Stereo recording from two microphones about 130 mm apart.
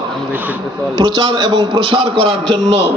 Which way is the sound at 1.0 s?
35° right (ahead or behind).